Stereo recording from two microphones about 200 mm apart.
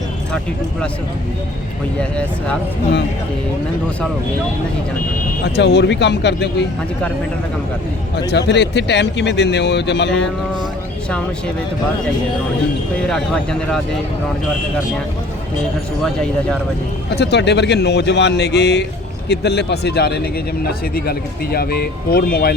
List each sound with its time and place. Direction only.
2.0 s speech: 5° left (ahead or behind)
5.5 s a man's voice: 55° left (ahead or behind)
8.3 s a man's voice: 60° left (ahead or behind)
13.1 s speech: 5° left (ahead or behind)
17.1 s a man's voice: 55° left (ahead or behind)